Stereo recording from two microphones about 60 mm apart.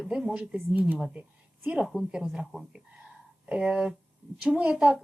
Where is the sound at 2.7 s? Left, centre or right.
Centre.